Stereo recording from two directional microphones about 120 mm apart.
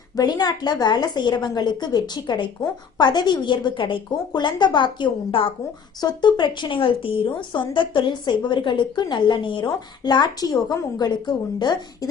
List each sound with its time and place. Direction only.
0.2 s a woman's voice: 35° left (ahead or behind)